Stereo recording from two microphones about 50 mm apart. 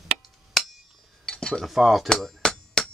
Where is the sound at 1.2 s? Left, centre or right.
Centre.